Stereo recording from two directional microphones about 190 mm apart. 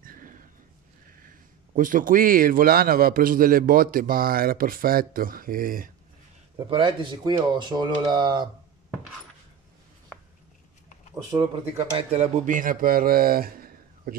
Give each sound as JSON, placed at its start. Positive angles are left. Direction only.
{"t": 0.0, "sound": "a sound", "side_deg": -45}
{"t": 1.8, "sound": "a man's voice", "side_deg": -45}
{"t": 6.7, "sound": "speech", "side_deg": -25}
{"t": 11.9, "sound": "speech", "side_deg": -35}